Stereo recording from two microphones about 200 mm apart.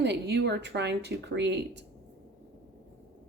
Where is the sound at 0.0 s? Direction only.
55° right (ahead or behind).